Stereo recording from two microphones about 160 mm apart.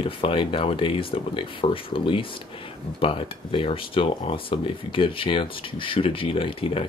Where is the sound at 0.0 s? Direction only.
35° left (ahead or behind).